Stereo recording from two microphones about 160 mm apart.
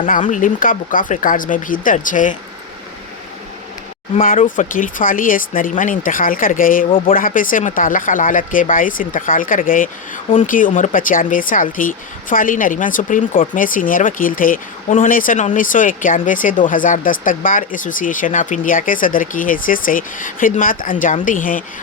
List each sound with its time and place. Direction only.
0.0 s speech: 50° left (ahead or behind)
4.1 s speech: 55° left (ahead or behind)